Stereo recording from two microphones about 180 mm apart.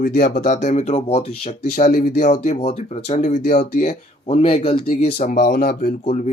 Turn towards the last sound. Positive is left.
turn(degrees=40)  # may be behind; listen again after turning